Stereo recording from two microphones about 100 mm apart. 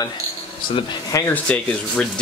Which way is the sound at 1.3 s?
10° left (ahead or behind).